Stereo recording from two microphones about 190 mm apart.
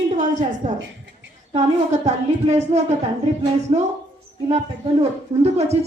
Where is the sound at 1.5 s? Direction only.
35° right (ahead or behind).